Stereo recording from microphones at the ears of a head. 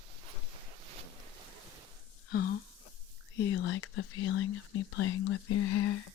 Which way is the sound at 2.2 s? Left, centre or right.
Left.